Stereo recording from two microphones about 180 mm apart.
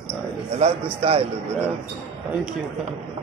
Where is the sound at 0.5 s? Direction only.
35° right (ahead or behind).